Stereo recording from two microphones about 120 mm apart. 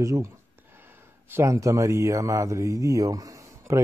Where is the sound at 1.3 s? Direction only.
25° right (ahead or behind).